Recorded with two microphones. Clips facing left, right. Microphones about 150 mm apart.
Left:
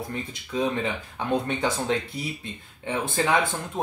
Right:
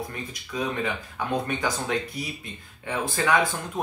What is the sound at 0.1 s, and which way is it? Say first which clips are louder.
Speech: left 3 dB; 25° left (ahead or behind).